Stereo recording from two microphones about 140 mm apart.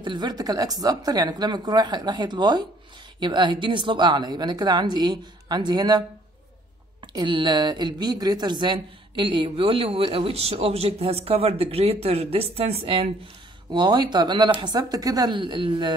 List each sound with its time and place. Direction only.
0.0 s a woman's voice: 30° right (ahead or behind)
13.7 s a woman's voice: 30° right (ahead or behind)